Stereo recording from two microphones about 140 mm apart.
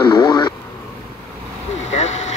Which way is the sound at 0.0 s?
10° left (ahead or behind).